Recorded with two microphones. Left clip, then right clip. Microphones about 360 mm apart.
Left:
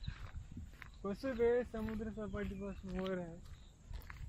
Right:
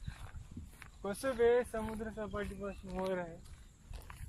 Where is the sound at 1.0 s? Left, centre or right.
Right.